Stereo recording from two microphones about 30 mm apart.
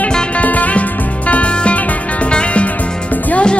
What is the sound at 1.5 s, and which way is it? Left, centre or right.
Music, left.